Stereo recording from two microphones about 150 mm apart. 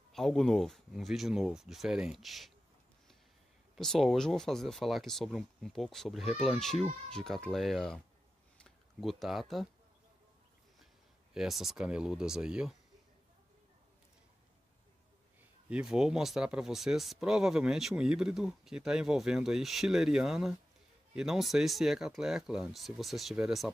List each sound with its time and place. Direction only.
0.1 s speech: centre (ahead or behind)
3.7 s speech: centre (ahead or behind)
11.3 s speech: centre (ahead or behind)
15.7 s speech: 5° right (ahead or behind)